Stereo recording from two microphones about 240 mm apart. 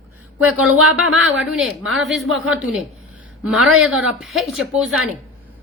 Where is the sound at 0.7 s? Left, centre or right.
Right.